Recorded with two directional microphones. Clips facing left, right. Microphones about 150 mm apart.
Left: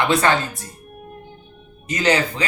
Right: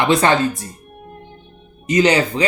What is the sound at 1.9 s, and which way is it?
Speech, 20° right (ahead or behind).